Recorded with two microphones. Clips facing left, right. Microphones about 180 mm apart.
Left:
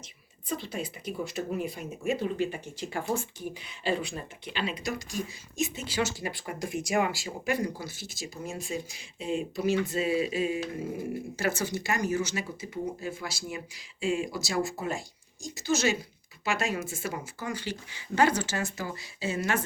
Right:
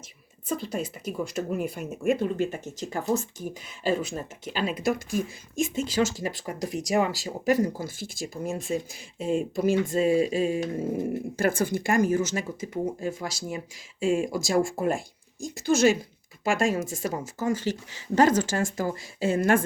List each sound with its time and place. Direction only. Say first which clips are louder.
0.6 s speech: right 4 dB; 45° right (ahead or behind)